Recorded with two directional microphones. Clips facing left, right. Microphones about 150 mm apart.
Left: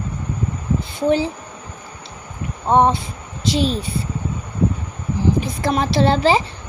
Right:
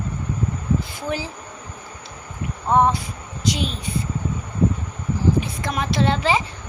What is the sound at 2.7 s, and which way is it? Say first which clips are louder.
Speech: left 3 dB; 25° left (ahead or behind).